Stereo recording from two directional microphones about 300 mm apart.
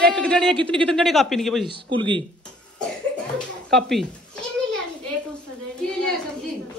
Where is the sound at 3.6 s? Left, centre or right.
Centre.